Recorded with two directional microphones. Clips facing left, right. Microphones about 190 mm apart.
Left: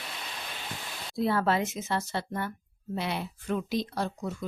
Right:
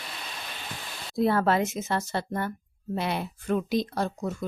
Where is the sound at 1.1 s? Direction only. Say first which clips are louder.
Right 3 dB; 50° right (ahead or behind).